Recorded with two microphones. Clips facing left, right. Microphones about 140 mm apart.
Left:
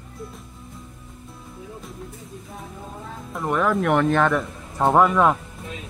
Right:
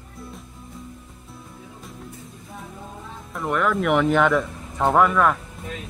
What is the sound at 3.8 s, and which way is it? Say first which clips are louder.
Speech: right 2 dB; centre (ahead or behind).